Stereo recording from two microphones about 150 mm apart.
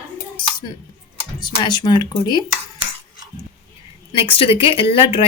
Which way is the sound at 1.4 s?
30° left (ahead or behind).